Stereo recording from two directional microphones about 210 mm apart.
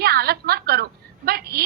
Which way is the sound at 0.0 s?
45° right (ahead or behind).